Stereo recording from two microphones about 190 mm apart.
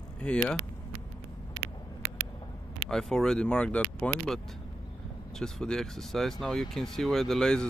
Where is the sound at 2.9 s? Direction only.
5° left (ahead or behind).